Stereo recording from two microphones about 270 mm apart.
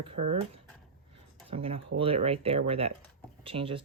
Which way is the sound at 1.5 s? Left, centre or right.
Right.